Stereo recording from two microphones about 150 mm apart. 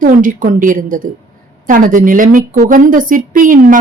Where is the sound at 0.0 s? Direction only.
60° right (ahead or behind).